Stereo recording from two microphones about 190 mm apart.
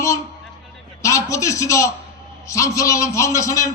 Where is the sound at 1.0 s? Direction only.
15° left (ahead or behind).